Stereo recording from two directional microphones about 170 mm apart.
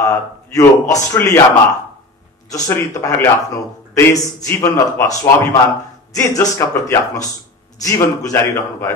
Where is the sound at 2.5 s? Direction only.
15° left (ahead or behind).